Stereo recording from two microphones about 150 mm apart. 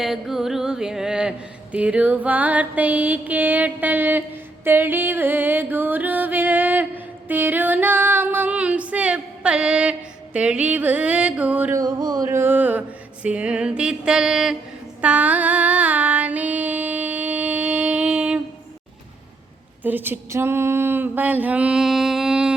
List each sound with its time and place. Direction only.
0.0 s carnatic music: centre (ahead or behind)
1.7 s music: 10° right (ahead or behind)
11.8 s music: 25° right (ahead or behind); by 14.5 s 5° right (ahead or behind)
15.0 s female singing: 10° right (ahead or behind)
19.8 s a sound: 10° right (ahead or behind)